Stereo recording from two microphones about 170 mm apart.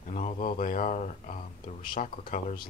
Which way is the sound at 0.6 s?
50° left (ahead or behind).